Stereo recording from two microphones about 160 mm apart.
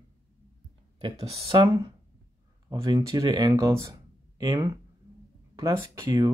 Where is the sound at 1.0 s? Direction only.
40° right (ahead or behind).